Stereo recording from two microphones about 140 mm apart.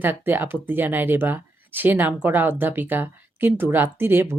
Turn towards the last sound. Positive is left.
turn(degrees=-15)  # may be behind; listen again after turning